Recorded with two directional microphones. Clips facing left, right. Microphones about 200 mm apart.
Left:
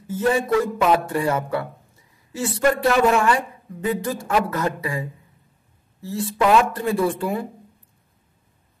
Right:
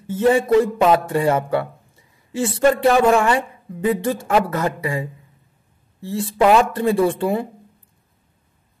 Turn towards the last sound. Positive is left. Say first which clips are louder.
# right 4 dB
turn(degrees=-25)  # may be behind; listen again after turning